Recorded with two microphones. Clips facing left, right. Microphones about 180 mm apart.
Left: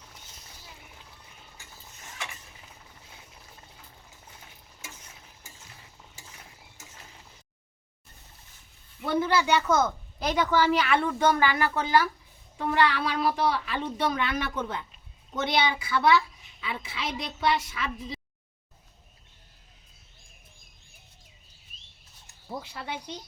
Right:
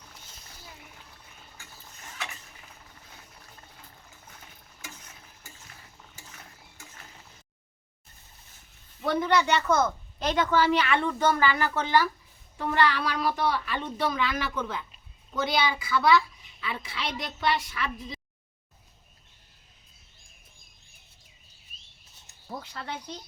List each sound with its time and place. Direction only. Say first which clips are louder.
9.0 s a woman's voice: even; 5° left (ahead or behind)
13.0 s a child's voice: left 1 dB; 25° left (ahead or behind); by 17.9 s 5° left (ahead or behind)
22.4 s speech: left 1 dB; 10° left (ahead or behind)